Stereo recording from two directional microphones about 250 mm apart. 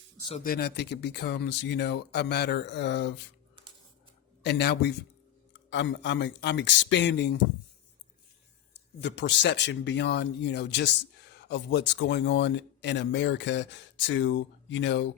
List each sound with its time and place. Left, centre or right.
0.3 s speech: left
4.4 s speech: left
9.0 s speech: left